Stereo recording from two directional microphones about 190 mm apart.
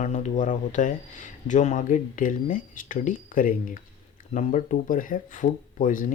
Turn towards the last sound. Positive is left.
turn(degrees=45)  # may be behind; listen again after turning